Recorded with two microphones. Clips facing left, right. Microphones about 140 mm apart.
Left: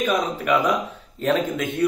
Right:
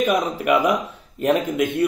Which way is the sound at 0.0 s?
15° right (ahead or behind).